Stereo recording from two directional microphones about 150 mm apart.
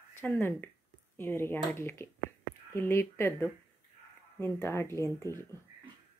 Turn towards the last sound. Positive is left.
turn(degrees=20)  # may be behind; listen again after turning